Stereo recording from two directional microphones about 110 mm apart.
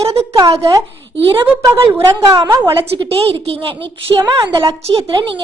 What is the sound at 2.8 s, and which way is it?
Speech, 55° right (ahead or behind).